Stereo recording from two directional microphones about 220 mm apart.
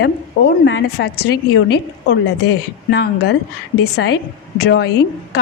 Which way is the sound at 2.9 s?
50° left (ahead or behind).